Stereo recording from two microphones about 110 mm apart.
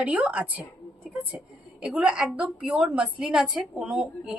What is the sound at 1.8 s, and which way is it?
A woman's voice, 5° right (ahead or behind).